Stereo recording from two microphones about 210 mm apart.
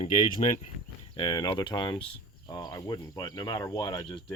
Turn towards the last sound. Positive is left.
turn(degrees=20)  # may be behind; listen again after turning